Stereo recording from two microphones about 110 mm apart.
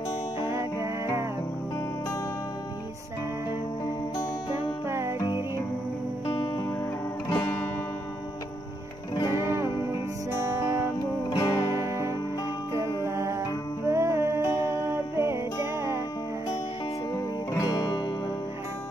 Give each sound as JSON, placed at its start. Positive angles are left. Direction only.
{"t": 0.4, "sound": "music", "side_deg": -25}
{"t": 4.8, "sound": "music", "side_deg": -25}
{"t": 6.2, "sound": "music", "side_deg": 55}
{"t": 9.3, "sound": "music", "side_deg": -25}
{"t": 11.2, "sound": "music", "side_deg": 40}
{"t": 11.7, "sound": "music", "side_deg": -25}
{"t": 17.5, "sound": "music", "side_deg": 40}